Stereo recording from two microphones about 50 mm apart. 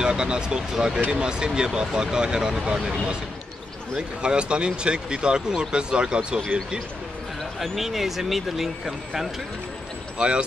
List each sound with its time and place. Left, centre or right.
0.0 s speech: centre
4.2 s speech: centre
7.5 s speech: centre
10.1 s a man's voice: centre